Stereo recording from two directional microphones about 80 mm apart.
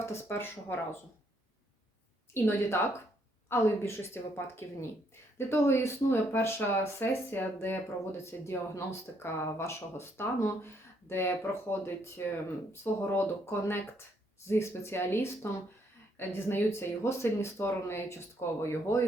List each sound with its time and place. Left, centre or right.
0.0 s speech: left
2.3 s speech: left